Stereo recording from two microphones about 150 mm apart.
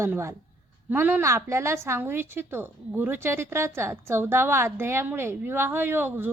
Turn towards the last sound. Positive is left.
turn(degrees=-15)  # may be behind; listen again after turning